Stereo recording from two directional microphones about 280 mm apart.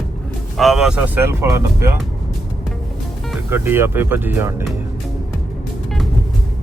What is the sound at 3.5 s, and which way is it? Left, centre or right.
Speech, centre.